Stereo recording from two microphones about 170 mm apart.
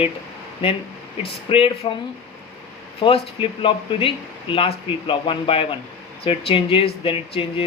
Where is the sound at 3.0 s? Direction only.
30° left (ahead or behind).